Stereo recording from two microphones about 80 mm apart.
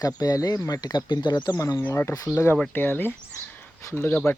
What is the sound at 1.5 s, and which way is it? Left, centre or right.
Speech, left.